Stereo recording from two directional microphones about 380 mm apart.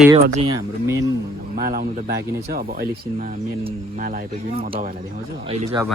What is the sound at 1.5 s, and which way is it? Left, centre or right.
Speech, right.